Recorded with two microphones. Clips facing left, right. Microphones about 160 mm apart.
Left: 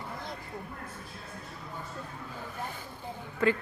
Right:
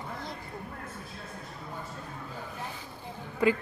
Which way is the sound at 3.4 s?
15° right (ahead or behind).